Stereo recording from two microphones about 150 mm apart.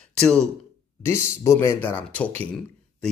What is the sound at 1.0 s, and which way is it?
Speech, 15° left (ahead or behind).